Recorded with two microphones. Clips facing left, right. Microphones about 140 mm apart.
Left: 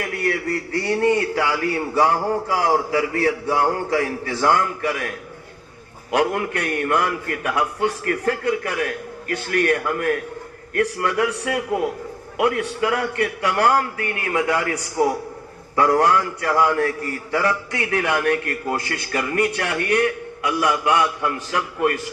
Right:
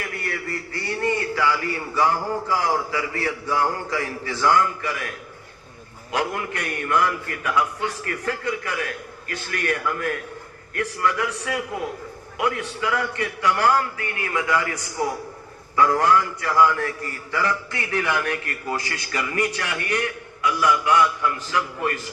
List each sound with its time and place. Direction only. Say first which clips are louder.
0.3 s a man's voice: left 7 dB; 65° left (ahead or behind)